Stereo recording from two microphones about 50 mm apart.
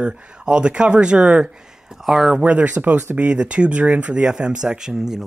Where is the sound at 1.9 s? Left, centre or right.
Centre.